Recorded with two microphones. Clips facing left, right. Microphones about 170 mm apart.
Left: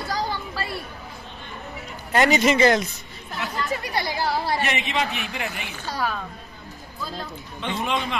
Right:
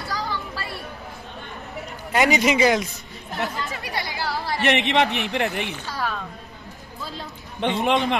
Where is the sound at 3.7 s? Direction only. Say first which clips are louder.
Left 4 dB; 35° left (ahead or behind).